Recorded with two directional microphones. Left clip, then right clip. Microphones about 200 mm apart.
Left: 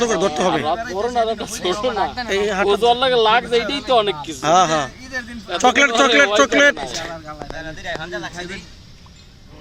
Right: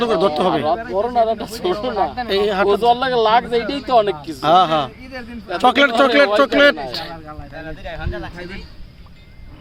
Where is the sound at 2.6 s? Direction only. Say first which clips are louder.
Left 2 dB; 30° right (ahead or behind).